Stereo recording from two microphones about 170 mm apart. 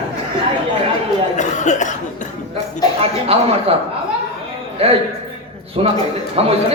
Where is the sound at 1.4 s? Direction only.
45° left (ahead or behind).